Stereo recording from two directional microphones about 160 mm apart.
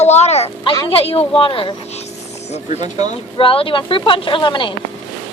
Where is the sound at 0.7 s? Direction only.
30° left (ahead or behind).